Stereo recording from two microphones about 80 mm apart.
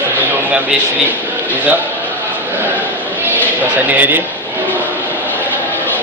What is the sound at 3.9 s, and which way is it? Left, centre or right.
Speech, right.